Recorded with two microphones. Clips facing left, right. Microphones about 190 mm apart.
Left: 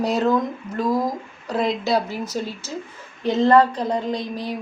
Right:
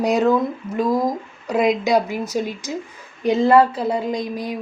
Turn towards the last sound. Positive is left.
turn(degrees=-10)  # may be behind; listen again after turning